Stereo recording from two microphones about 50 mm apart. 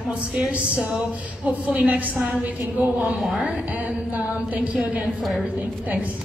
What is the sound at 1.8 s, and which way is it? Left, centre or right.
A woman's voice, right.